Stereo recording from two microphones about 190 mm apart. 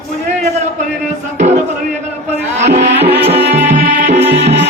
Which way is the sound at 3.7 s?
40° right (ahead or behind).